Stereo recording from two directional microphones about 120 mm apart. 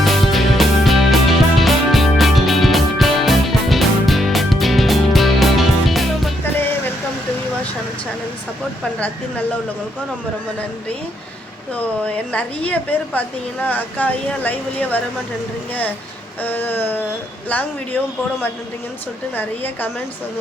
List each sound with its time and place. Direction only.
0.0 s music: centre (ahead or behind)
11.7 s a woman's voice: 10° left (ahead or behind)
16.4 s a woman's voice: 15° left (ahead or behind)
19.4 s a woman's voice: 15° left (ahead or behind)